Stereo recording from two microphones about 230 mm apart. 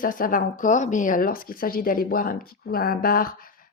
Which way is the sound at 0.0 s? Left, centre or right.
Left.